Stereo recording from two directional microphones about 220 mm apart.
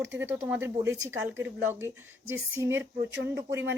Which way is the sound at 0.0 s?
10° right (ahead or behind).